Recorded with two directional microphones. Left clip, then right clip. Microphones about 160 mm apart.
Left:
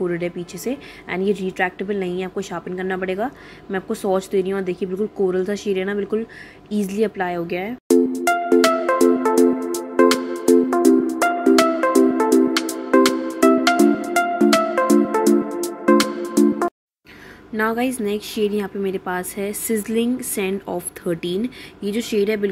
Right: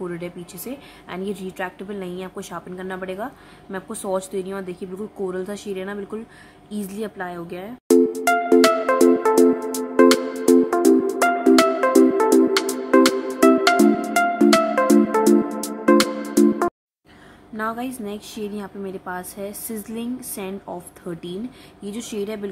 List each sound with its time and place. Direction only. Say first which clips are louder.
0.0 s a woman's voice: left 7 dB; 10° left (ahead or behind)
7.9 s music: right 1 dB; centre (ahead or behind)
17.6 s a woman's voice: left 6 dB; 10° left (ahead or behind)